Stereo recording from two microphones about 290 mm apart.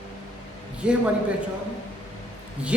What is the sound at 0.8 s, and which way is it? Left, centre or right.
Speech, centre.